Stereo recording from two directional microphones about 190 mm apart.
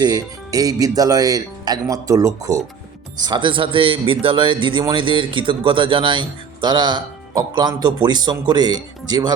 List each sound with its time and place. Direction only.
0.0 s a man's voice: 20° right (ahead or behind)